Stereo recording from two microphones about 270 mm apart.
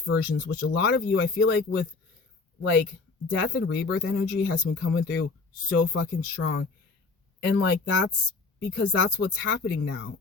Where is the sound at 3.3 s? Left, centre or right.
Left.